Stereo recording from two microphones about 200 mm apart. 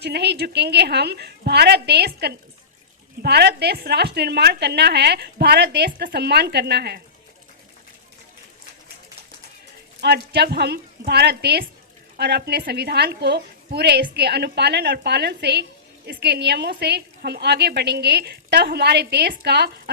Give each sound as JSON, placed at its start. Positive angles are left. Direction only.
{"t": 0.0, "sound": "a woman's voice", "side_deg": -55}
{"t": 10.0, "sound": "a woman's voice", "side_deg": -55}